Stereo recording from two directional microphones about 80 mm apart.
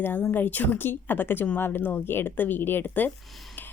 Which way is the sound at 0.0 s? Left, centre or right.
Left.